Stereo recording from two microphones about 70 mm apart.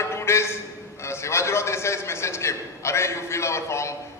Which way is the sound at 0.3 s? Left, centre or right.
Left.